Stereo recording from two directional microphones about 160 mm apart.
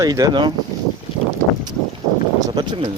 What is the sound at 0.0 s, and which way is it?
Speech, 20° right (ahead or behind).